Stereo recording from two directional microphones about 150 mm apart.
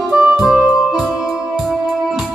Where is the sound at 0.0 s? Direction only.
5° right (ahead or behind).